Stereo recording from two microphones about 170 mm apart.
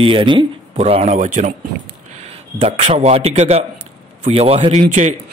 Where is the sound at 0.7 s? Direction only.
40° right (ahead or behind).